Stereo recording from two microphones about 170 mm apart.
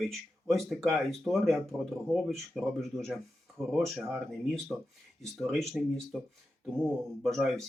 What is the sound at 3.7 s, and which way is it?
Speech, centre (ahead or behind).